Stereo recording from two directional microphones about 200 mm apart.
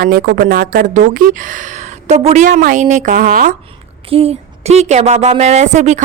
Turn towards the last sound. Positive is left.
turn(degrees=-35)  # may be behind; listen again after turning